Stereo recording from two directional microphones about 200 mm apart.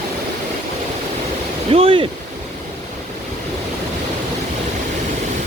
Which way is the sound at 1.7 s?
30° right (ahead or behind).